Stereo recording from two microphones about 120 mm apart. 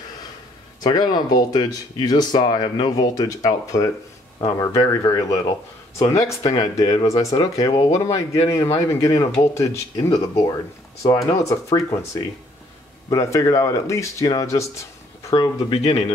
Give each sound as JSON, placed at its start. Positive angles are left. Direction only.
{"t": 0.7, "sound": "speech", "side_deg": 35}
{"t": 7.9, "sound": "speech", "side_deg": 25}
{"t": 15.3, "sound": "speech", "side_deg": 40}
{"t": 15.8, "sound": "speech", "side_deg": 55}